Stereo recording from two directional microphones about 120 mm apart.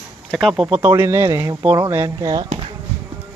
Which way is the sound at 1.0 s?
20° right (ahead or behind).